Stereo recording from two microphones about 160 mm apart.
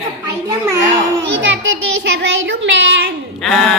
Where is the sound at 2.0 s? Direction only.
90° right.